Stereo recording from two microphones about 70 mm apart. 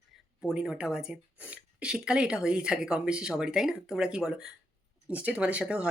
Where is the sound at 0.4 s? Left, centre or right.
Centre.